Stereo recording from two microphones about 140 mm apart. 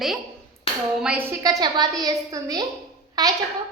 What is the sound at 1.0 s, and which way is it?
Speech, 15° right (ahead or behind).